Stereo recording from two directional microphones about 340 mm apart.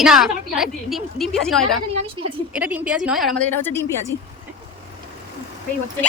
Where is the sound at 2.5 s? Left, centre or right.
Centre.